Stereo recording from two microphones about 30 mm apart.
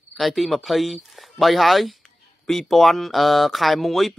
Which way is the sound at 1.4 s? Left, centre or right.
Centre.